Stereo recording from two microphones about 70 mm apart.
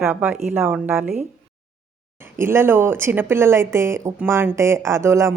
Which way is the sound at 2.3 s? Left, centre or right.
Right.